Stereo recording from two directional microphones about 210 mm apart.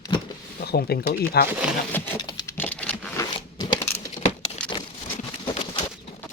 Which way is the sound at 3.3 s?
20° left (ahead or behind).